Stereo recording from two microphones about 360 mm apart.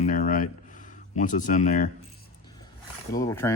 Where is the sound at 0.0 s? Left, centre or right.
Left.